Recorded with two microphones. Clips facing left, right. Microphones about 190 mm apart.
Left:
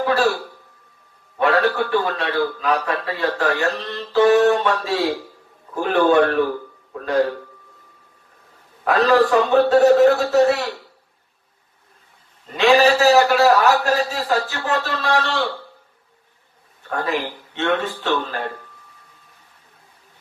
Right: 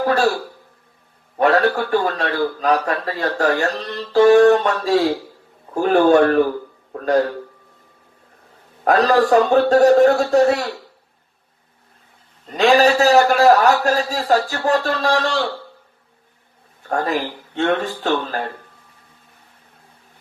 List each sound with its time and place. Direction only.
0.0 s throat clearing: 45° right (ahead or behind)
1.4 s a man's voice: 45° right (ahead or behind)
8.8 s a man's voice: 45° right (ahead or behind)
12.5 s a man's voice: 40° right (ahead or behind)
16.9 s a man's voice: 40° right (ahead or behind)